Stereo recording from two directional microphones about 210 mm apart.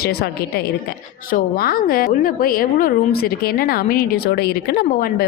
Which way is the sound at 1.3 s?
45° left (ahead or behind).